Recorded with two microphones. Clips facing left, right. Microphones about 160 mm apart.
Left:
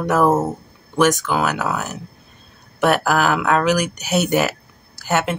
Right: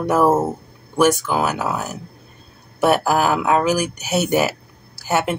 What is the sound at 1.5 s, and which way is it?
Speech, 25° right (ahead or behind).